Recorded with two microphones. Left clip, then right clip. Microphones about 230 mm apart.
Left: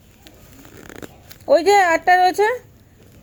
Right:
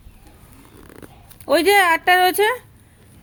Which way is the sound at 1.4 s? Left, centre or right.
Right.